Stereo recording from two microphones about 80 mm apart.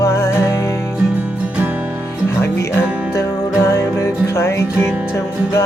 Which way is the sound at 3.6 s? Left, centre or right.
Left.